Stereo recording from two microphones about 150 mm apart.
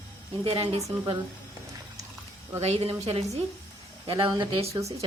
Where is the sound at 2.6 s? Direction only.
45° right (ahead or behind).